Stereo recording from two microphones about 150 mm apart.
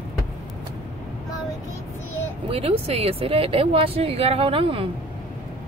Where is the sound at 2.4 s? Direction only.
40° right (ahead or behind).